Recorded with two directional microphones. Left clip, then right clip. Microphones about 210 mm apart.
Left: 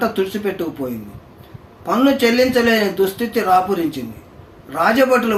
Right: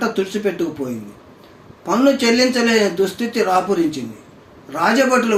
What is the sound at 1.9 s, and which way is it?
A man's voice, 15° left (ahead or behind).